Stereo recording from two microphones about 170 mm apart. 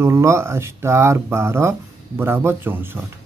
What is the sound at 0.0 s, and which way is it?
Speech, 15° right (ahead or behind).